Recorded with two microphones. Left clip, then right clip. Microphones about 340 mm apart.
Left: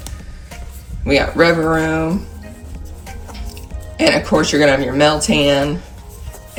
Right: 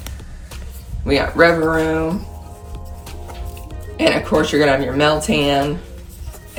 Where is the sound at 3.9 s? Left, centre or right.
Centre.